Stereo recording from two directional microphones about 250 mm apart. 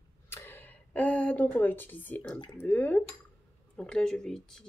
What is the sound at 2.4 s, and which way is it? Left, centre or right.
Speech, centre.